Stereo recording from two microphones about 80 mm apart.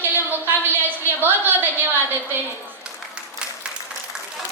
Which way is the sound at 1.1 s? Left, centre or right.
Right.